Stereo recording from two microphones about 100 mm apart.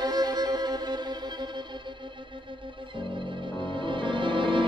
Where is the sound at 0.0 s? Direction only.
40° right (ahead or behind).